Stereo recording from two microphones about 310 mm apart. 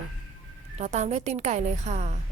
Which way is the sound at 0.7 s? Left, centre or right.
Right.